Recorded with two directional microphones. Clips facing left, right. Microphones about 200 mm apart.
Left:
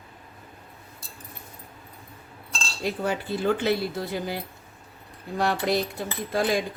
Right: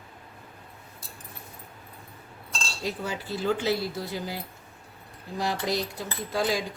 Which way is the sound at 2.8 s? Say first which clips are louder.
Left 5 dB; 55° left (ahead or behind).